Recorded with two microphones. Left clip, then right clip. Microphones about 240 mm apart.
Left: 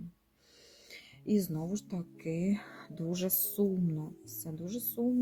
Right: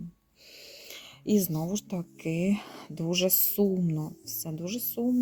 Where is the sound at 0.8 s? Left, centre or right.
Right.